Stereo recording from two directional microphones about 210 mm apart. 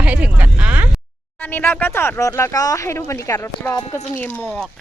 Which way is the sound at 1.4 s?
10° left (ahead or behind).